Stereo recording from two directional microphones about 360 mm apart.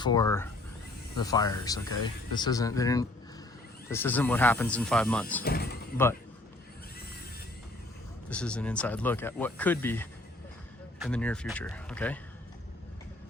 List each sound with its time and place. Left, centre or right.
0.0 s speech: centre
5.4 s speech: left
8.3 s speech: centre